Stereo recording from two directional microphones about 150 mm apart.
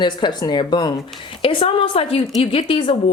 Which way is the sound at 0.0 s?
30° left (ahead or behind).